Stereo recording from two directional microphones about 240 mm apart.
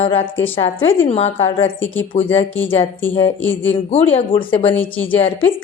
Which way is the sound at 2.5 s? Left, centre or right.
Centre.